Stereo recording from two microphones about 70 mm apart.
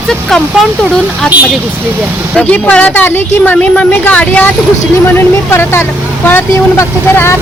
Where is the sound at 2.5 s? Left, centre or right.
Centre.